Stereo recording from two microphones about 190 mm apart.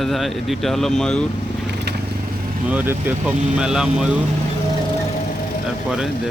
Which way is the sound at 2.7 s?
10° right (ahead or behind).